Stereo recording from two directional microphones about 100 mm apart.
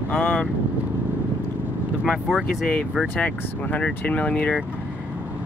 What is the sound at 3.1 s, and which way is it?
Speech, 15° left (ahead or behind).